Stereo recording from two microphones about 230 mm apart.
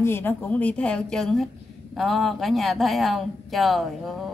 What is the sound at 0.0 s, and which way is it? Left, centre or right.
Speech, centre.